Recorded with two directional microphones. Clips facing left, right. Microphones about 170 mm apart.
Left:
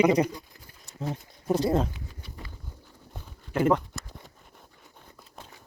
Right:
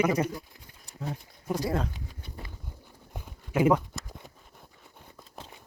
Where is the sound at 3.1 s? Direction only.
10° right (ahead or behind).